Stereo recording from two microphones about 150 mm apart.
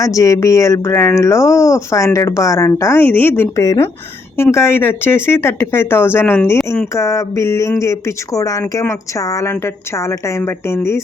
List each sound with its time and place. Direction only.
0.0 s speech: 20° left (ahead or behind)